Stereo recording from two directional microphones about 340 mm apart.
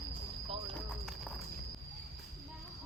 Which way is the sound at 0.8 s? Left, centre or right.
Centre.